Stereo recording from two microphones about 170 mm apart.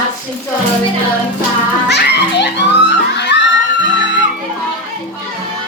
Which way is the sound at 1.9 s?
85° left.